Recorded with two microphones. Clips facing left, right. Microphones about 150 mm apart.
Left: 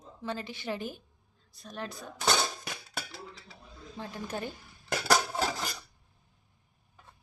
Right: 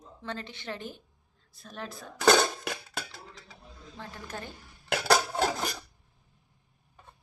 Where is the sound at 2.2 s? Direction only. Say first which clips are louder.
Right 7 dB; 85° right.